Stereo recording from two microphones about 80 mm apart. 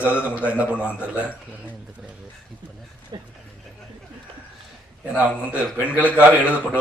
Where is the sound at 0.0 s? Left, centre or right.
Centre.